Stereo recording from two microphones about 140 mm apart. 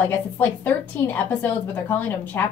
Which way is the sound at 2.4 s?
20° left (ahead or behind).